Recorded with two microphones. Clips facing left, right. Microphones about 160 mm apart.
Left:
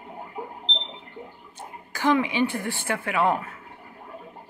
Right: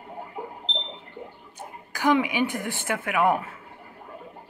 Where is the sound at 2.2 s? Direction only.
15° right (ahead or behind).